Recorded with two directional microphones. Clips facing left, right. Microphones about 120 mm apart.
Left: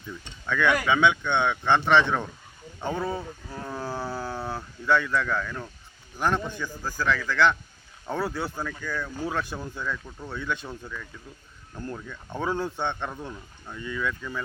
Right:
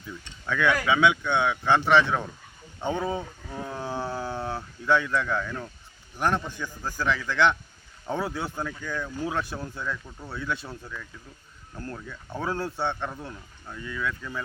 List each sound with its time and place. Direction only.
0.1 s speech: 5° right (ahead or behind)
3.2 s wild animals: centre (ahead or behind)
3.8 s a sound: 15° right (ahead or behind)
4.5 s speech: 10° right (ahead or behind)
11.9 s speech: 5° right (ahead or behind)